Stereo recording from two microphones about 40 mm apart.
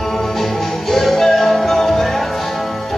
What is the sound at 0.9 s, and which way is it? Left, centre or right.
Music, centre.